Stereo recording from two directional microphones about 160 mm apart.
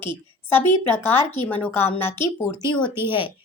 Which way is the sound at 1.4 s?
10° left (ahead or behind).